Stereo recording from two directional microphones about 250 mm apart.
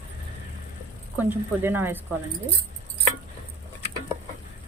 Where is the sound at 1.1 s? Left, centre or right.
Centre.